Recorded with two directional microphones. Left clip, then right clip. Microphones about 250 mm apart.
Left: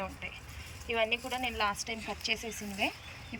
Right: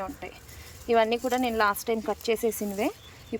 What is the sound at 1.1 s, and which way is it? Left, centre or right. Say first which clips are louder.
Speech: right 7 dB; centre.